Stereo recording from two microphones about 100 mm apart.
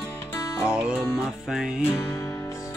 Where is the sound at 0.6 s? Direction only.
10° right (ahead or behind).